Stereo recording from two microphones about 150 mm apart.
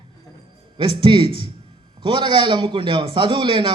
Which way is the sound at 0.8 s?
35° right (ahead or behind).